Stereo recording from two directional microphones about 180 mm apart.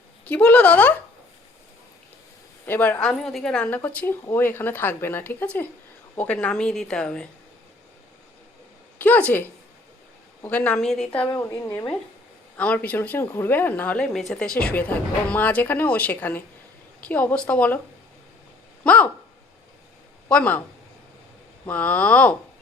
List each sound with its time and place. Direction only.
0.3 s speech: 5° left (ahead or behind)
2.6 s a woman's voice: 10° left (ahead or behind)
9.0 s speech: 10° left (ahead or behind)
11.3 s speech: 15° left (ahead or behind)
18.9 s speech: 10° left (ahead or behind)
20.2 s speech: 10° left (ahead or behind)
21.7 s speech: 10° left (ahead or behind)